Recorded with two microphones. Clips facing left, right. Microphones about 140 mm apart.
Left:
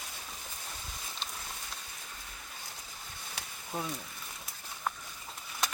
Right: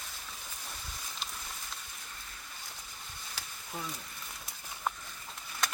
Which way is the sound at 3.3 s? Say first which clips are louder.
Left 5 dB; 25° left (ahead or behind).